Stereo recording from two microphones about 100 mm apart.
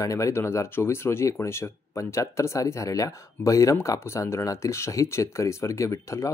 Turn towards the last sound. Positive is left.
turn(degrees=30)  # may be behind; listen again after turning